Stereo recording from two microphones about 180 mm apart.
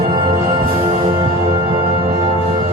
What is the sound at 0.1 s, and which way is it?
Music, 30° right (ahead or behind).